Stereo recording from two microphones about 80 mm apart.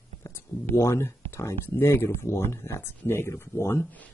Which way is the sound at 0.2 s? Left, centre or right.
Left.